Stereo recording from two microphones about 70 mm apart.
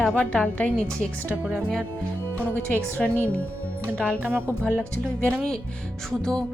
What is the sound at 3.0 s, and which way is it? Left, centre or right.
Speech, centre.